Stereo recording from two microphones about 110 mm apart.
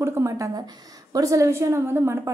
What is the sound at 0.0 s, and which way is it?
A woman's voice, 25° right (ahead or behind).